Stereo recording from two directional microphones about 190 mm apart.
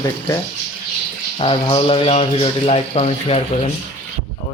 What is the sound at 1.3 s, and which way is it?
Speech, 30° left (ahead or behind).